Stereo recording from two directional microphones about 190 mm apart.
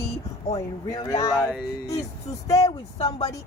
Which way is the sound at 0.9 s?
20° left (ahead or behind).